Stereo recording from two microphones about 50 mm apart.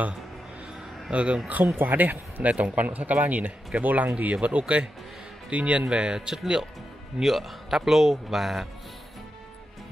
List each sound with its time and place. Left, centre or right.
1.1 s speech: right
1.8 s a man's voice: right; by 8.6 s centre